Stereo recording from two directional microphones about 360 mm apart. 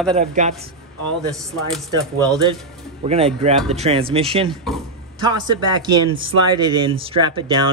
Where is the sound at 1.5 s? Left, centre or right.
Centre.